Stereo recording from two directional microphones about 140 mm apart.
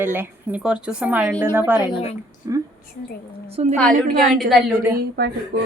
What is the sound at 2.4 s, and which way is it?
Speech, 25° right (ahead or behind).